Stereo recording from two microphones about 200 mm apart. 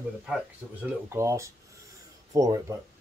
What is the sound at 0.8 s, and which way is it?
Speech, 15° right (ahead or behind).